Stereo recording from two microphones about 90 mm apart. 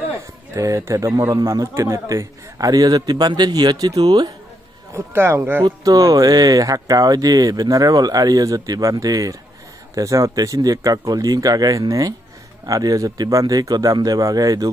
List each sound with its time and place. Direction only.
0.6 s a man's voice: 35° right (ahead or behind)
4.9 s speech: 30° right (ahead or behind)
5.9 s a man's voice: 45° right (ahead or behind)